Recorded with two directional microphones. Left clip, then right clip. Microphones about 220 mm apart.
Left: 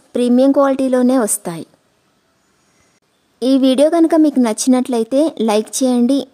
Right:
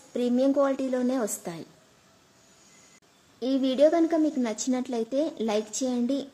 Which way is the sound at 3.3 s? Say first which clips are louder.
Left 11 dB; 50° left (ahead or behind).